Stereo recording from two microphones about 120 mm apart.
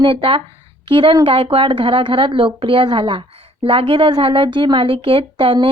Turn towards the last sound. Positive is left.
turn(degrees=-45)  # may be behind; listen again after turning